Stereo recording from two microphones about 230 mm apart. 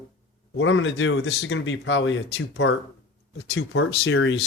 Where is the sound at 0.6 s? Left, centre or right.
Left.